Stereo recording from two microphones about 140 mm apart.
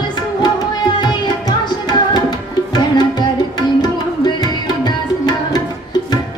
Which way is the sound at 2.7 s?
30° left (ahead or behind).